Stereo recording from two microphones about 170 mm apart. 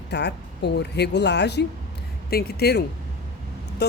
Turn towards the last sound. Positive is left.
turn(degrees=75)  # may be behind; listen again after turning